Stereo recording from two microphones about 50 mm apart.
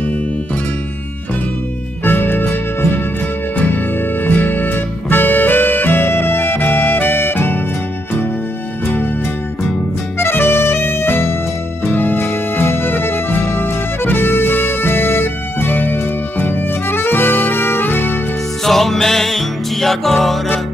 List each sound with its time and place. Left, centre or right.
2.0 s music: left
10.1 s music: left
18.6 s music: centre